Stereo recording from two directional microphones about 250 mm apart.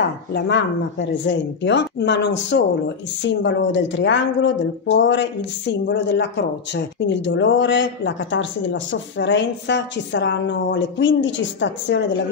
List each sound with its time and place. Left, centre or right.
0.3 s speech: left